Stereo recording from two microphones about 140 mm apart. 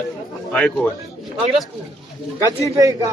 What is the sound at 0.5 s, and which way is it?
Speech, 10° left (ahead or behind).